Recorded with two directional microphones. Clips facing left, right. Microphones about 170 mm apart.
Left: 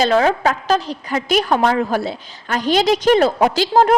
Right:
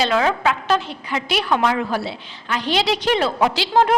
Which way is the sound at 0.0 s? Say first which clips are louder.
Left 4 dB; 40° left (ahead or behind).